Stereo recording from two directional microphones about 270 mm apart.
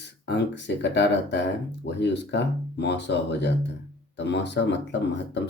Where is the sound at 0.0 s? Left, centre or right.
Left.